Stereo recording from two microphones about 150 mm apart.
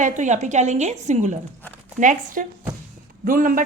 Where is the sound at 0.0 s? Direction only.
55° right (ahead or behind).